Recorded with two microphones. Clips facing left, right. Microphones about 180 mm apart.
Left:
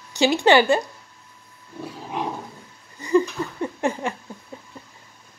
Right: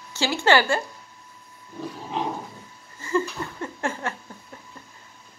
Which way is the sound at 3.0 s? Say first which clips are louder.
Left 6 dB; 15° left (ahead or behind).